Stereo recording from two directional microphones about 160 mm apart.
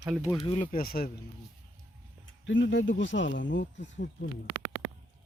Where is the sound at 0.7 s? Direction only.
70° left (ahead or behind).